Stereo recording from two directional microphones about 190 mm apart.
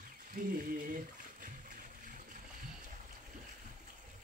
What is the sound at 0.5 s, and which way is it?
Speech, 45° right (ahead or behind).